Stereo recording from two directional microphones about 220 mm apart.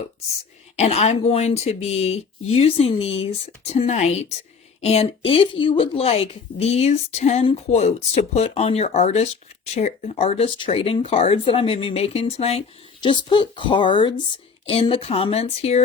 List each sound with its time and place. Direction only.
0.8 s speech: 30° left (ahead or behind)